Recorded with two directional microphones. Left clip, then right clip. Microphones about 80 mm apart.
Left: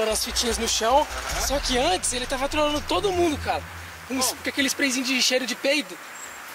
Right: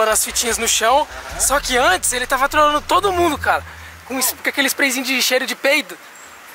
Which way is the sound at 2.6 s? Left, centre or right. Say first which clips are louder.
Right 9 dB; left.